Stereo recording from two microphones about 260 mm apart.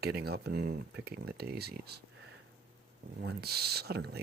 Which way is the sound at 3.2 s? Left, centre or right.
Right.